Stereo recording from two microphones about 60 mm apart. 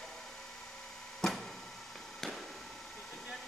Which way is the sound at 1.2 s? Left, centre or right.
Centre.